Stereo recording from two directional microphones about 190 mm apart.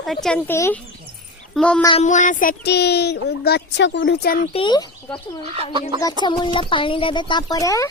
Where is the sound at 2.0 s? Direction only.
40° left (ahead or behind).